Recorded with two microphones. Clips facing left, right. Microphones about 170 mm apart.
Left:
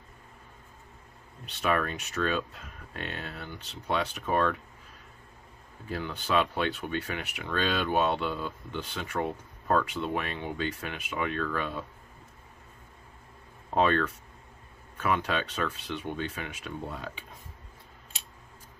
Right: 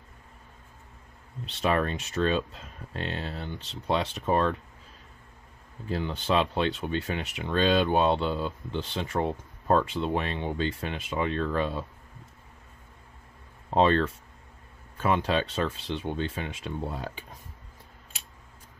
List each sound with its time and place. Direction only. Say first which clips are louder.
1.4 s speech: right 2 dB; 25° right (ahead or behind)
5.9 s speech: right 4 dB; 25° right (ahead or behind)
13.7 s speech: right 3 dB; 30° right (ahead or behind)